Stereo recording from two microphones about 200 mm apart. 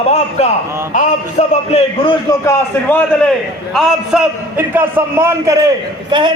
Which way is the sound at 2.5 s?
10° left (ahead or behind).